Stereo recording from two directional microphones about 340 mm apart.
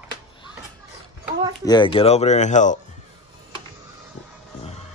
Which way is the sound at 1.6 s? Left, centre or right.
Centre.